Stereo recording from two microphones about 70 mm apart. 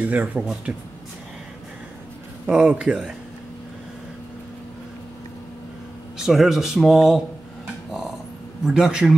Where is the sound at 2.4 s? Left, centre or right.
Centre.